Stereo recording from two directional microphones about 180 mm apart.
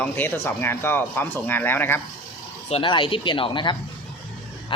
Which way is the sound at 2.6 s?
30° left (ahead or behind).